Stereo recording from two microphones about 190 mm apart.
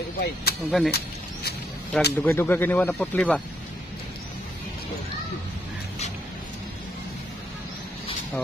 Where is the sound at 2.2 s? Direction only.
10° left (ahead or behind).